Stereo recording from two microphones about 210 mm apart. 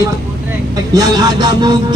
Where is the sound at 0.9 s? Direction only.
20° right (ahead or behind).